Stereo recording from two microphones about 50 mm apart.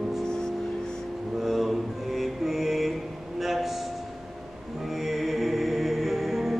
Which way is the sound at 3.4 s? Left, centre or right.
Centre.